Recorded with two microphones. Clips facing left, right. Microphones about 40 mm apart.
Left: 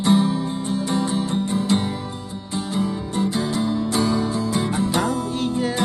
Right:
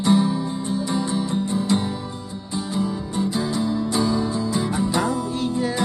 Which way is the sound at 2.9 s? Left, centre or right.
Left.